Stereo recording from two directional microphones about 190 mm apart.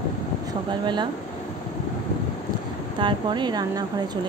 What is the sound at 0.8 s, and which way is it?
Speech, 25° right (ahead or behind).